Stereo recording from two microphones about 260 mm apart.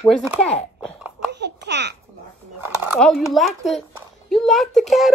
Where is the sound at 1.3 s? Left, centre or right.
Right.